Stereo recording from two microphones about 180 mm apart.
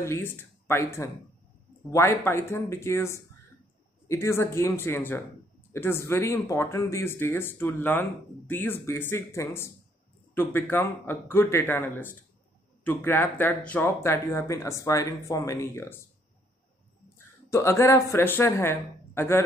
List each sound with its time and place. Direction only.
0.0 s speech: 15° left (ahead or behind)
17.5 s speech: 15° left (ahead or behind)